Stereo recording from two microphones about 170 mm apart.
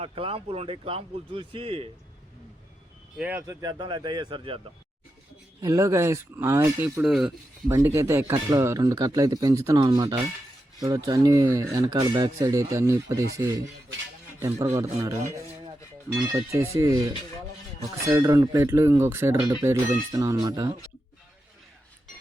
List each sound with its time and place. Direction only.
0.0 s speech: 35° right (ahead or behind)
3.2 s speech: 10° right (ahead or behind)
3.4 s speech: 20° right (ahead or behind)
5.6 s speech: 20° right (ahead or behind)
7.0 s speech: 5° right (ahead or behind)
7.7 s a man's voice: 15° right (ahead or behind)